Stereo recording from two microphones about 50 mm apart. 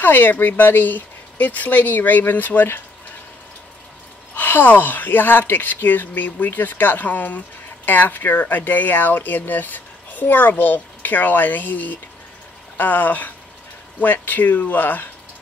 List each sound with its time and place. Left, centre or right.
0.0 s speech: left
4.4 s speech: left